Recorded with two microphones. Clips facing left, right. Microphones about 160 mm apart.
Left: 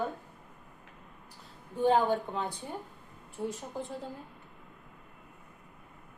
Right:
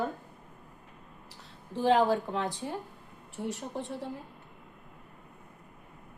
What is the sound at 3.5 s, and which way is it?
Speech, 75° right (ahead or behind).